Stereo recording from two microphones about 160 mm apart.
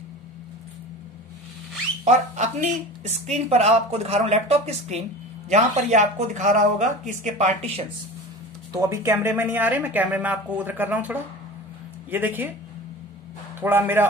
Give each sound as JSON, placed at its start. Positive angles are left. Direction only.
{"t": 2.0, "sound": "speech", "side_deg": -45}
{"t": 8.7, "sound": "speech", "side_deg": -15}
{"t": 13.6, "sound": "speech", "side_deg": -15}